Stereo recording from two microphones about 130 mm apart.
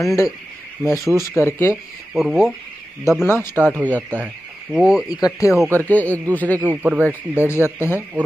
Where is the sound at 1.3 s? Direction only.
20° left (ahead or behind).